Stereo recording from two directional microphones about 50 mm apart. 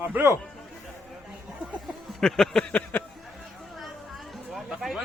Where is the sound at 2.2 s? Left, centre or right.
Centre.